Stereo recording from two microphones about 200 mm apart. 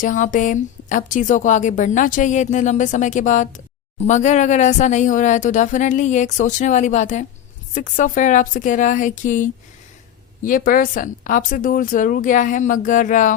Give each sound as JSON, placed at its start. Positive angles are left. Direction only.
{"t": 0.0, "sound": "a woman's voice", "side_deg": 40}